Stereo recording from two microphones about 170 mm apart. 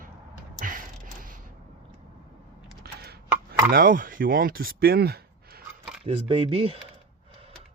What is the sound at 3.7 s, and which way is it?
Speech, 55° right (ahead or behind).